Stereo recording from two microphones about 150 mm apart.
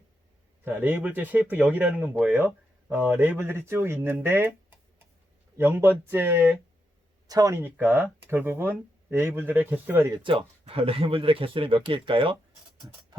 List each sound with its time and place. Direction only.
0.6 s speech: 10° right (ahead or behind)
5.5 s speech: 15° right (ahead or behind)
10.7 s speech: 40° right (ahead or behind)